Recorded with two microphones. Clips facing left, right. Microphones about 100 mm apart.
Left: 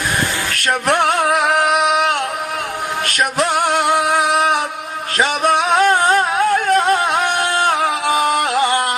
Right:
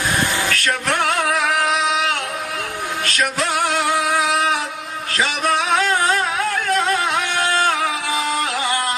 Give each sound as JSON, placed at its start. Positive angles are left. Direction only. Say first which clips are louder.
{"t": 0.6, "sound": "music", "louder": "left 8 dB", "side_deg": 25}
{"t": 1.6, "sound": "singing", "louder": "left 4 dB", "side_deg": 55}
{"t": 3.2, "sound": "music", "louder": "left 4 dB", "side_deg": 30}
{"t": 5.8, "sound": "music", "louder": "left 5 dB", "side_deg": 40}
{"t": 8.0, "sound": "music", "louder": "left 6 dB", "side_deg": 50}